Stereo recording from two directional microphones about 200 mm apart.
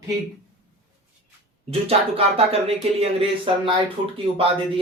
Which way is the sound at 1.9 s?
30° right (ahead or behind).